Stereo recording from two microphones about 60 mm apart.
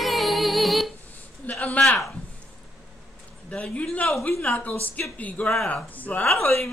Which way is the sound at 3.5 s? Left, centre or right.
Centre.